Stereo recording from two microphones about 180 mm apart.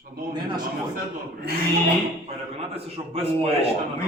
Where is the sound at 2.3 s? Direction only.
35° right (ahead or behind).